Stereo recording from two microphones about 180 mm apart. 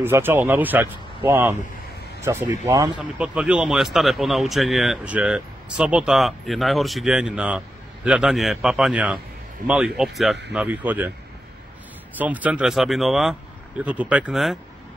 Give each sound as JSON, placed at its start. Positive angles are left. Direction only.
{"t": 0.0, "sound": "speech", "side_deg": -10}
{"t": 3.0, "sound": "speech", "side_deg": -5}
{"t": 12.2, "sound": "speech", "side_deg": -10}